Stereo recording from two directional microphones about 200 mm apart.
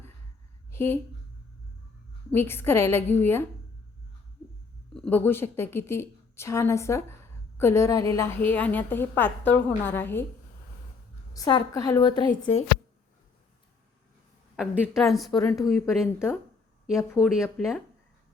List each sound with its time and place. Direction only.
0.7 s a sound: 10° left (ahead or behind)
2.3 s a woman's voice: 10° left (ahead or behind)
4.9 s a woman's voice: 10° left (ahead or behind)
11.3 s a woman's voice: 20° left (ahead or behind)
14.5 s a woman's voice: centre (ahead or behind)
15.3 s a woman's voice: 15° left (ahead or behind)
15.6 s a woman's voice: centre (ahead or behind)
17.2 s a woman's voice: 5° right (ahead or behind)